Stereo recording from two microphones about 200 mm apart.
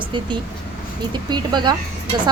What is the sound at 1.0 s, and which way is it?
Speech, 20° right (ahead or behind).